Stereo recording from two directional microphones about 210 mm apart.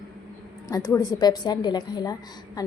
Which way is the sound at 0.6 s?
15° left (ahead or behind).